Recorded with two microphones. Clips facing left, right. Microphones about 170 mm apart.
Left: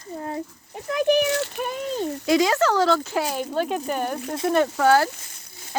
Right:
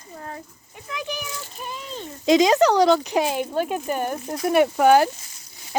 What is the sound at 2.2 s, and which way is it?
Speech, 20° right (ahead or behind).